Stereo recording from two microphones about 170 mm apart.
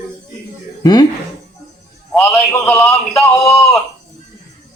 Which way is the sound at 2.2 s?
15° left (ahead or behind).